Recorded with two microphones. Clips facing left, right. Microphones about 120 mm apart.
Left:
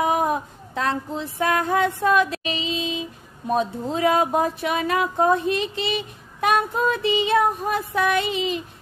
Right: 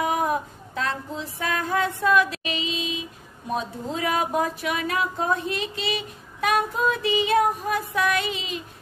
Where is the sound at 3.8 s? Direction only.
25° left (ahead or behind).